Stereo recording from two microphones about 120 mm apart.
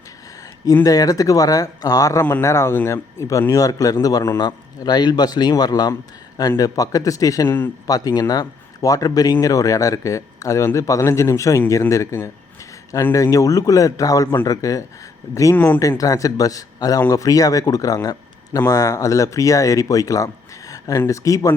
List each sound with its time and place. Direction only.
0.6 s a man's voice: 30° left (ahead or behind)
7.9 s speech: 30° left (ahead or behind)
15.5 s speech: 15° left (ahead or behind)
15.8 s speech: 30° left (ahead or behind)